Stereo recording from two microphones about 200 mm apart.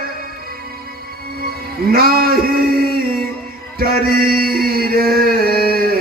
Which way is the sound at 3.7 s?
50° right (ahead or behind).